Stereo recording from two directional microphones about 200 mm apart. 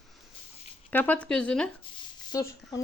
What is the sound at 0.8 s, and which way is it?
Speech, 10° left (ahead or behind).